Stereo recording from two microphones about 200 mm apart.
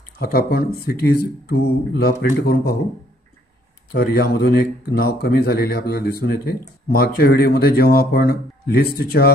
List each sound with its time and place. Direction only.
0.2 s speech: 50° left (ahead or behind)
3.9 s speech: 50° left (ahead or behind)